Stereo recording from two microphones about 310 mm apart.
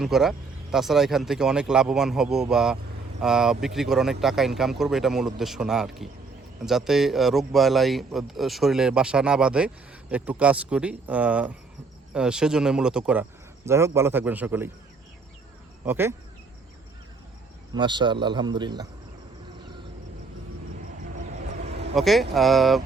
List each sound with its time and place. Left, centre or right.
0.0 s a man's voice: centre
15.9 s a man's voice: centre
17.7 s a man's voice: centre
21.9 s speech: centre